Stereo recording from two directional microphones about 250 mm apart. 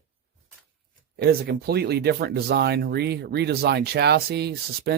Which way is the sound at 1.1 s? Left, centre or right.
Right.